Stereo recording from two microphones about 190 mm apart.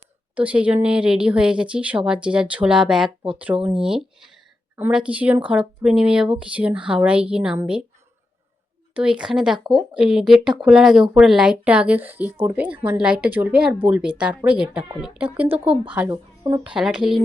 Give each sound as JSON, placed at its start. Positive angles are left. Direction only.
{"t": 0.3, "sound": "speech", "side_deg": -5}
{"t": 9.0, "sound": "speech", "side_deg": -5}
{"t": 15.4, "sound": "speech", "side_deg": -30}
{"t": 16.7, "sound": "speech", "side_deg": -5}